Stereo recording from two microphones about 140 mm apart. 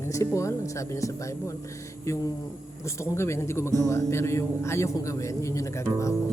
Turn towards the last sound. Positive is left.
turn(degrees=20)  # may be behind; listen again after turning